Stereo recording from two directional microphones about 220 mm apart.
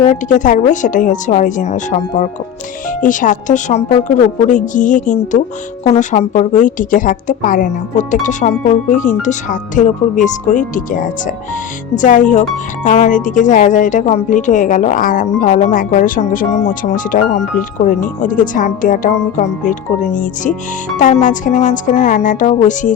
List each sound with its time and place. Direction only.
0.1 s speech: 35° left (ahead or behind)
11.9 s speech: 35° left (ahead or behind)